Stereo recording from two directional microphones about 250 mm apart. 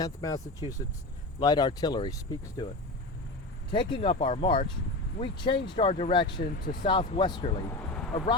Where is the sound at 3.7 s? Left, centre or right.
Left.